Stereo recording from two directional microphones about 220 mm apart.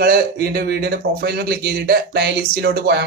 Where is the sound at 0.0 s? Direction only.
45° right (ahead or behind).